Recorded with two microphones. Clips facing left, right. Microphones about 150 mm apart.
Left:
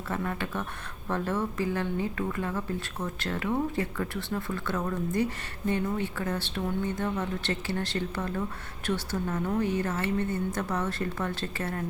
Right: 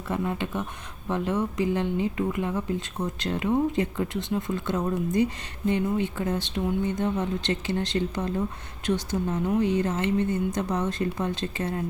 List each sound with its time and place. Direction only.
0.1 s a woman's voice: 20° right (ahead or behind)